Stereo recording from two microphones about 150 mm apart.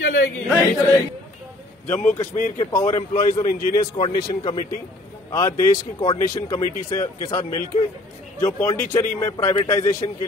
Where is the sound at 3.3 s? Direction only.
25° left (ahead or behind).